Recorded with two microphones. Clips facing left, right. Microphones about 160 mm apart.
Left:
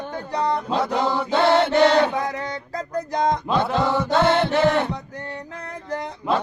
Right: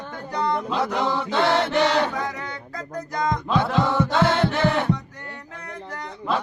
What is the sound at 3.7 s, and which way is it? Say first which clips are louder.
Chant: even; centre (ahead or behind).